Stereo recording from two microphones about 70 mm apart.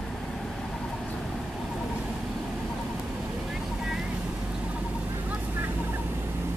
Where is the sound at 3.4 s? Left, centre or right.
Centre.